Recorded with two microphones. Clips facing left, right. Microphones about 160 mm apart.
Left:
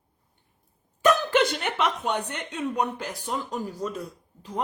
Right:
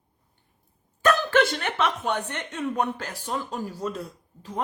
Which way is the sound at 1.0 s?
15° left (ahead or behind).